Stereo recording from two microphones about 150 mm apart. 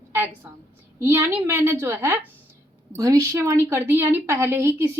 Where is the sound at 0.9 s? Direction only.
15° right (ahead or behind).